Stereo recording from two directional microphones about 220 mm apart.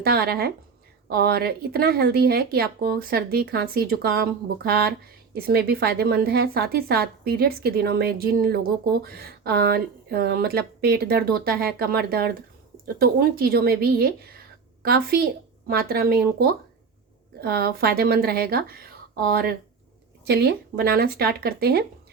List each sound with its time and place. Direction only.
0.0 s speech: 45° right (ahead or behind)